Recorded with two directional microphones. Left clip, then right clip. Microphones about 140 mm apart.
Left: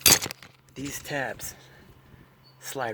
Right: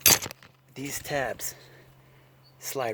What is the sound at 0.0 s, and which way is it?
Chink, 10° left (ahead or behind).